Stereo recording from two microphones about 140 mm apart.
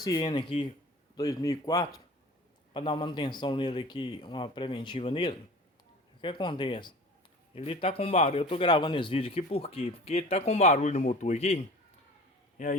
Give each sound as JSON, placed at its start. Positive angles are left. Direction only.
{"t": 0.0, "sound": "speech", "side_deg": 25}
{"t": 2.7, "sound": "speech", "side_deg": 35}
{"t": 8.6, "sound": "speech", "side_deg": 30}
{"t": 12.6, "sound": "a man's voice", "side_deg": 65}